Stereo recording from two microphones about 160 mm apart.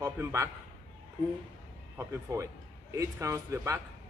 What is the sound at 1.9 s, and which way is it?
Speech, 20° right (ahead or behind).